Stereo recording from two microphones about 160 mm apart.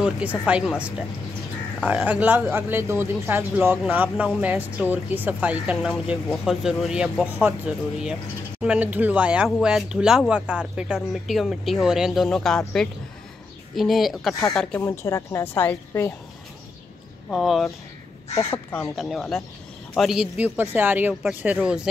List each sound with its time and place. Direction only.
0.0 s a woman's voice: 10° right (ahead or behind)
14.9 s a woman's voice: 20° left (ahead or behind)
17.3 s speech: centre (ahead or behind)
18.4 s a woman's voice: 15° left (ahead or behind)
18.9 s speech: centre (ahead or behind)